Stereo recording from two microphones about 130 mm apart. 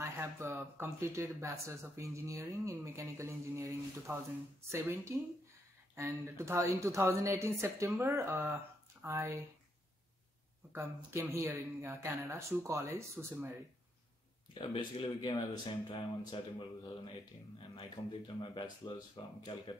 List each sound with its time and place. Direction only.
0.0 s speech: 20° right (ahead or behind)
10.7 s speech: 20° right (ahead or behind)
14.5 s speech: 35° left (ahead or behind)